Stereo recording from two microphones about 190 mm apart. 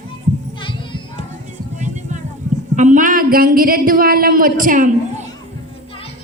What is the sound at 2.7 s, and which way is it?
Speech, 40° right (ahead or behind).